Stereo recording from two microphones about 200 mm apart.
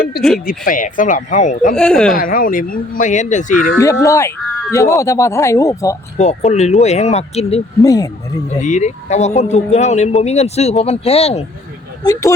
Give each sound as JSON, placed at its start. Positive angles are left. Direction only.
{"t": 0.3, "sound": "speech", "side_deg": 45}
{"t": 1.7, "sound": "speech", "side_deg": 5}
{"t": 2.1, "sound": "speech", "side_deg": 45}
{"t": 3.8, "sound": "speech", "side_deg": 15}
{"t": 6.1, "sound": "speech", "side_deg": 35}
{"t": 7.8, "sound": "speech", "side_deg": 15}
{"t": 8.4, "sound": "speech", "side_deg": 35}